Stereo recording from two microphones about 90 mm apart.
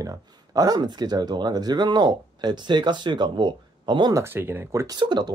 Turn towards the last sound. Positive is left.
turn(degrees=-55)  # may be behind; listen again after turning